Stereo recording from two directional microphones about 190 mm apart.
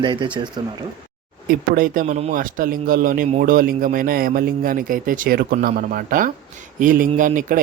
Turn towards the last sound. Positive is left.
turn(degrees=-45)  # may be behind; listen again after turning